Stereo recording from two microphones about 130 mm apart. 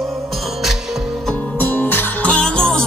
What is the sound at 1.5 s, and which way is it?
Music, 15° left (ahead or behind).